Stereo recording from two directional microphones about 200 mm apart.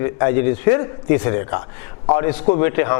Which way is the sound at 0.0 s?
15° left (ahead or behind).